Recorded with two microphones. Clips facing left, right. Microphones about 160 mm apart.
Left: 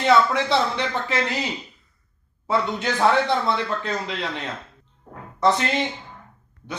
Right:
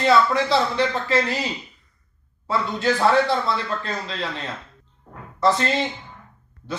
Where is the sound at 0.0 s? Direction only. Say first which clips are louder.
Even; 20° left (ahead or behind).